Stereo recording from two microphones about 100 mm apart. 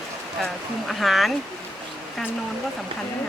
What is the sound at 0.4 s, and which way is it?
Speech, centre (ahead or behind).